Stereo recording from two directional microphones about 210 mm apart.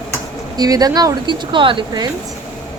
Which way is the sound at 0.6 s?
20° right (ahead or behind).